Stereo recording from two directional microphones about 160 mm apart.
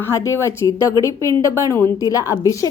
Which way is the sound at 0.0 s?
15° left (ahead or behind).